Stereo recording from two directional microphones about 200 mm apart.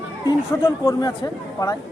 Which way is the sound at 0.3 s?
15° left (ahead or behind).